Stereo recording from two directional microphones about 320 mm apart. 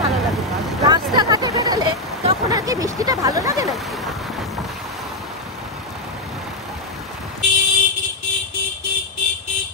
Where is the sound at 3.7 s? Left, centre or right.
Centre.